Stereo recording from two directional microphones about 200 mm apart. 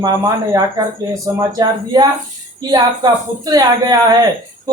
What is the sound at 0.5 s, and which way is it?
A woman's voice, 15° right (ahead or behind).